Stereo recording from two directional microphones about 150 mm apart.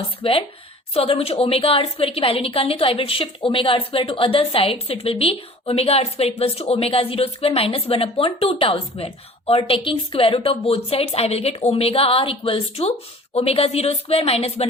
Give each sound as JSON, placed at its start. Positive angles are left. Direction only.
{"t": 0.2, "sound": "a woman's voice", "side_deg": 40}